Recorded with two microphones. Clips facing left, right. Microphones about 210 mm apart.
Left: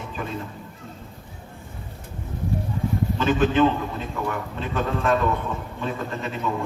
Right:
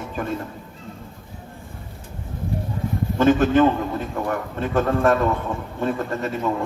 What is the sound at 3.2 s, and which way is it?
A man's voice, 50° right (ahead or behind).